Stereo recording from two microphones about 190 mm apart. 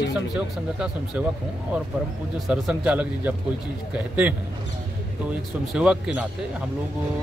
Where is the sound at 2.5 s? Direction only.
5° right (ahead or behind).